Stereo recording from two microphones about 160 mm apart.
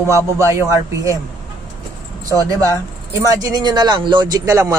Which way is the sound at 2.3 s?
20° right (ahead or behind).